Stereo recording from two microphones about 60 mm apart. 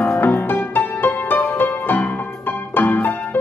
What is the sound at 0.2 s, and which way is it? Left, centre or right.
Music, left.